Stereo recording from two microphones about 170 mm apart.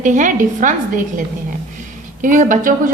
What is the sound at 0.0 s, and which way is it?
Speech, 50° right (ahead or behind).